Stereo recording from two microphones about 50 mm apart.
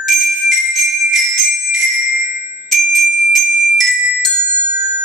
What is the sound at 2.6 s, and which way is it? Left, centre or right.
Glockenspiel, centre.